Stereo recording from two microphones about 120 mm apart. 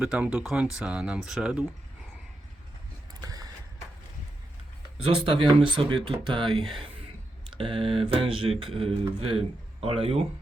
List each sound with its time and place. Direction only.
0.0 s speech: 10° right (ahead or behind)
3.2 s mechanisms: 30° right (ahead or behind)
4.9 s speech: 50° right (ahead or behind)